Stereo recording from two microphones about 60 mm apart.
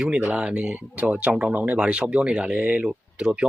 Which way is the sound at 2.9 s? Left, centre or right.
Centre.